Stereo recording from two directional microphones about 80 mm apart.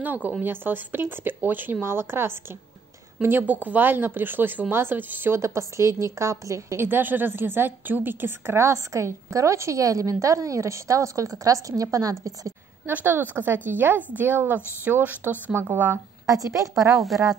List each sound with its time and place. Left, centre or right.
0.0 s speech: right
6.9 s a woman's voice: right
12.8 s a woman's voice: right
16.3 s a woman's voice: right